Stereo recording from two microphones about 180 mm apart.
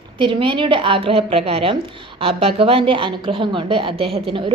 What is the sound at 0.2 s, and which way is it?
A woman's voice, 30° right (ahead or behind).